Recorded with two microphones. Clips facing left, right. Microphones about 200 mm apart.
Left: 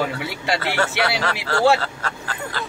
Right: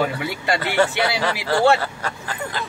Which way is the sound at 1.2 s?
15° right (ahead or behind).